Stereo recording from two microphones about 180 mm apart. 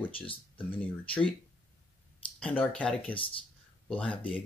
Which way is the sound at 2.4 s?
5° left (ahead or behind).